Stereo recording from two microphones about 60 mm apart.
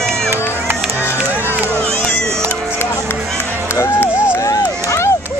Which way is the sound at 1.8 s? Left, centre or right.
Centre.